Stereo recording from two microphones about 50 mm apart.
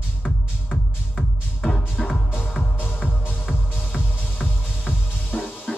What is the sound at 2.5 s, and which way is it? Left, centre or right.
Music, left.